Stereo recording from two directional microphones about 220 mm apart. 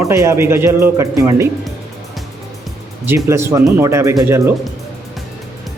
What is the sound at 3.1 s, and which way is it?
Speech, 10° right (ahead or behind).